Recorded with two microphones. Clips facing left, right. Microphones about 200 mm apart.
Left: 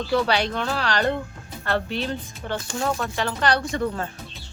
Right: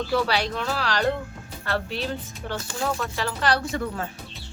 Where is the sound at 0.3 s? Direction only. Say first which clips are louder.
Left 2 dB; centre (ahead or behind).